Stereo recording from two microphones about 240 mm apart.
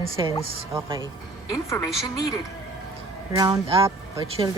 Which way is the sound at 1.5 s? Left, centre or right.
Centre.